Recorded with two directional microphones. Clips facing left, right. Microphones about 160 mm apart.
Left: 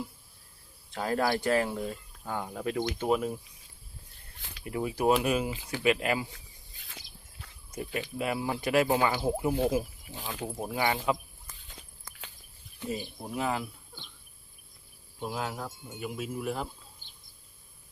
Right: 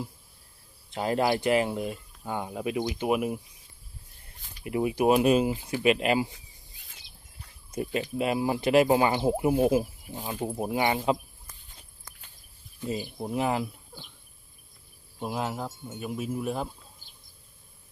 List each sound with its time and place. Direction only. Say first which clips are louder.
0.9 s speech: right 3 dB; 20° right (ahead or behind)
4.6 s speech: right 3 dB; 20° right (ahead or behind)
6.7 s a sound: left 9 dB; 90° left
8.2 s speech: right 5 dB; 20° right (ahead or behind)
12.8 s speech: right 2 dB; 75° left (ahead or behind)
13.1 s speech: right 5 dB; 25° right (ahead or behind)
15.2 s speech: right 3 dB; 20° right (ahead or behind)